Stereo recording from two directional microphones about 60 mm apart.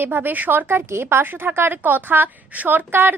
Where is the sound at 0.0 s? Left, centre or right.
Right.